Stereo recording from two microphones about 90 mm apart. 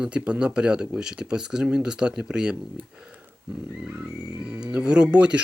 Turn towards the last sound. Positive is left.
turn(degrees=-10)  # may be behind; listen again after turning